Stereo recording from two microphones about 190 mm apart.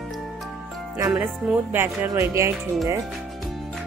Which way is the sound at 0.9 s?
15° right (ahead or behind).